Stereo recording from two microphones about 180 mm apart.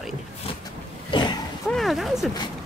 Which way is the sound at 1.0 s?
25° left (ahead or behind).